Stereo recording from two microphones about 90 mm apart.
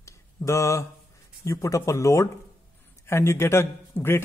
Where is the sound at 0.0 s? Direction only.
35° left (ahead or behind).